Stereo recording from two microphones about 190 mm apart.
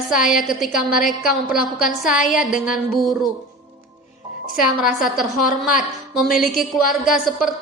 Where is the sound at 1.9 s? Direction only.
Centre (ahead or behind).